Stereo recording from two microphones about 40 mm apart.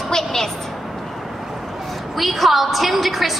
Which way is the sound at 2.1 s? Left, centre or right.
Centre.